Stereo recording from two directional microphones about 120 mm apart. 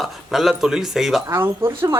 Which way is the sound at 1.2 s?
20° right (ahead or behind).